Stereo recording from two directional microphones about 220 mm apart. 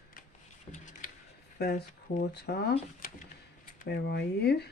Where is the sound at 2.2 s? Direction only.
45° left (ahead or behind).